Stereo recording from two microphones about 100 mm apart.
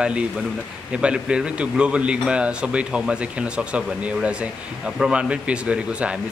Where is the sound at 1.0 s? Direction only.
10° right (ahead or behind).